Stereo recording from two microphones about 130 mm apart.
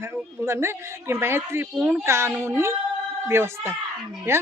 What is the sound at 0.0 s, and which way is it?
Speech, 20° right (ahead or behind).